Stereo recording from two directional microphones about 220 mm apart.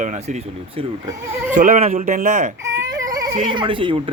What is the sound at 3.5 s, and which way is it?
Speech, 20° right (ahead or behind).